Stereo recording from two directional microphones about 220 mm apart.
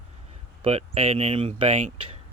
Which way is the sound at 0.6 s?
25° right (ahead or behind).